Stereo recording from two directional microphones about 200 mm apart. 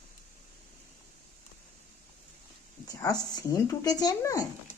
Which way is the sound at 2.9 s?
20° left (ahead or behind).